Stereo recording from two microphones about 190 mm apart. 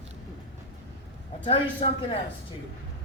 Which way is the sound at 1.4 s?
30° left (ahead or behind).